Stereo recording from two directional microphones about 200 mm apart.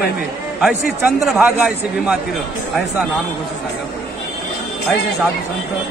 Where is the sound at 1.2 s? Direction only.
Centre (ahead or behind).